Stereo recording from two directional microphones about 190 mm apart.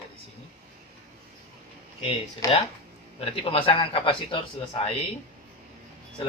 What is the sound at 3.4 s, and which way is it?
Speech, 30° left (ahead or behind).